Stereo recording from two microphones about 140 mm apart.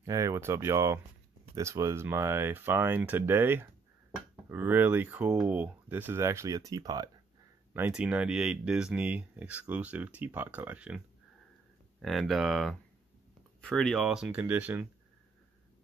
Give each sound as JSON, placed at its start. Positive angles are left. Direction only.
{"t": 0.0, "sound": "speech", "side_deg": -25}
{"t": 7.7, "sound": "speech", "side_deg": -10}
{"t": 12.0, "sound": "speech", "side_deg": 0}